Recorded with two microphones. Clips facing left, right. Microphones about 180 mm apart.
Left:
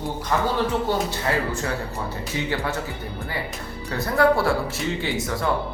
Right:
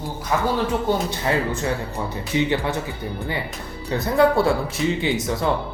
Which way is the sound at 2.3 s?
20° right (ahead or behind).